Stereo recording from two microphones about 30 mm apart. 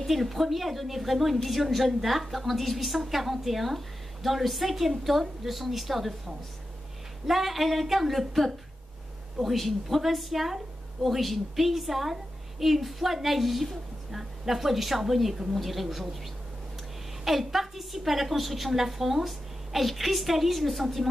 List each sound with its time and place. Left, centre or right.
0.0 s a woman's voice: centre
7.2 s a woman's voice: centre
17.2 s a woman's voice: centre